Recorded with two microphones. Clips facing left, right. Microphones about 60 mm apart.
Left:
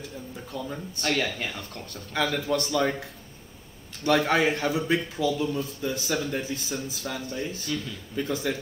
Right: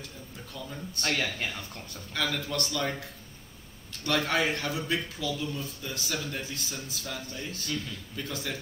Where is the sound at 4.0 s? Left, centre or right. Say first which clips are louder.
Left 5 dB; centre.